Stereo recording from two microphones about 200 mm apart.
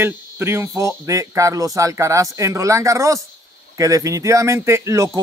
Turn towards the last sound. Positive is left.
turn(degrees=-15)  # may be behind; listen again after turning